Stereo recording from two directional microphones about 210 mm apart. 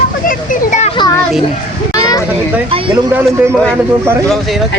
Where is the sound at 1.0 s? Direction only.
20° left (ahead or behind).